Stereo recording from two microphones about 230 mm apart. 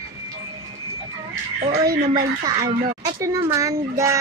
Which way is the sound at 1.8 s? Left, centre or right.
Centre.